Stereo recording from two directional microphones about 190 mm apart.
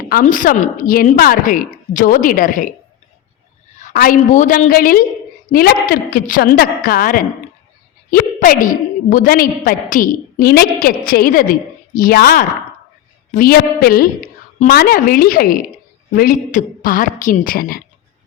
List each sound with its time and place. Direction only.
0.1 s a woman's voice: 45° left (ahead or behind)
3.8 s a woman's voice: 45° left (ahead or behind)